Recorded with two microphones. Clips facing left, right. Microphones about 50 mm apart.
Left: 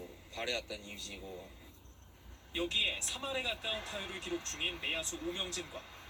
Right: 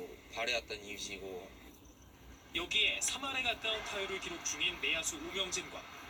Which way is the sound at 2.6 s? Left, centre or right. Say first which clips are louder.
Right 2 dB; right.